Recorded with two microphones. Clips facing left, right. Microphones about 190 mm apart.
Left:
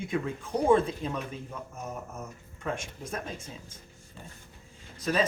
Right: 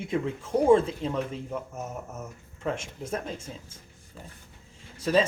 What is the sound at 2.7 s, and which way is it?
Speech, 25° right (ahead or behind).